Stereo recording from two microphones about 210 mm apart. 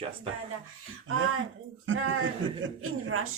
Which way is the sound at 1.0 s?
70° right (ahead or behind).